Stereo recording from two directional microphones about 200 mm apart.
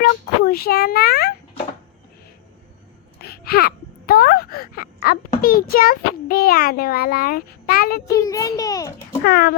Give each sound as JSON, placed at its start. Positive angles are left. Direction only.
{"t": 0.0, "sound": "speech", "side_deg": 50}
{"t": 3.2, "sound": "a sound", "side_deg": 50}
{"t": 8.0, "sound": "a child's voice", "side_deg": 15}
{"t": 9.2, "sound": "speech", "side_deg": 50}